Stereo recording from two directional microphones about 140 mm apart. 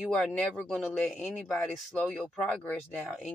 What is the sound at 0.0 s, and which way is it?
Speech, 5° left (ahead or behind).